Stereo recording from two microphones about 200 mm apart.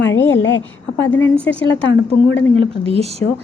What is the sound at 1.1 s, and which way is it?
Speech, 10° left (ahead or behind).